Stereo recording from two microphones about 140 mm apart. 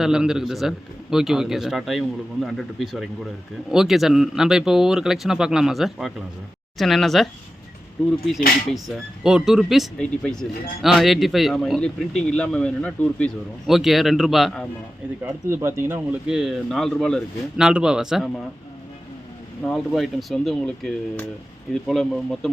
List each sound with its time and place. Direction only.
0.0 s speech: 5° right (ahead or behind)
9.2 s speech: 5° right (ahead or behind)
15.2 s speech: 15° right (ahead or behind)
16.2 s speech: 5° right (ahead or behind)
17.6 s speech: 5° right (ahead or behind)
19.6 s speech: centre (ahead or behind)